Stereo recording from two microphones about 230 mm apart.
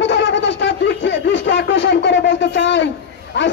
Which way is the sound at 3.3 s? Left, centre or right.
Left.